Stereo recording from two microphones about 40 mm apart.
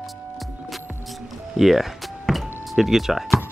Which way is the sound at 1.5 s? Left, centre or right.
Centre.